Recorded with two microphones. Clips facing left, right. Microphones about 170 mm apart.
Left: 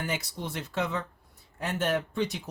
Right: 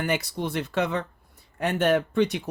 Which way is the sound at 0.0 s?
65° right (ahead or behind).